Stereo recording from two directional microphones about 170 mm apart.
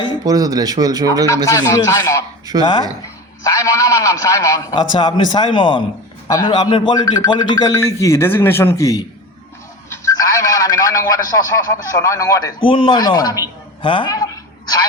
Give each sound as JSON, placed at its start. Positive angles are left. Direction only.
{"t": 0.3, "sound": "speech", "side_deg": -20}
{"t": 1.3, "sound": "speech", "side_deg": 20}
{"t": 3.4, "sound": "speech", "side_deg": 20}
{"t": 9.9, "sound": "a sound", "side_deg": 20}
{"t": 12.6, "sound": "a man's voice", "side_deg": 30}